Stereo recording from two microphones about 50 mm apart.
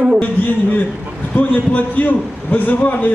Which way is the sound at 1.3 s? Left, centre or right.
Left.